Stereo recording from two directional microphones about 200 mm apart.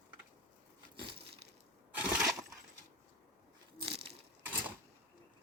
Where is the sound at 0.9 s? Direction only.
25° right (ahead or behind).